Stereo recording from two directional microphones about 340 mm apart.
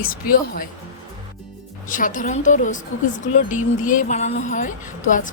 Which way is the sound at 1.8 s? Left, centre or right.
Left.